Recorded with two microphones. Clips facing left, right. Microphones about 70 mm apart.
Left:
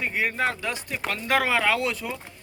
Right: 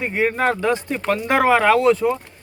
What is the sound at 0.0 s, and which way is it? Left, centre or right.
Speech, right.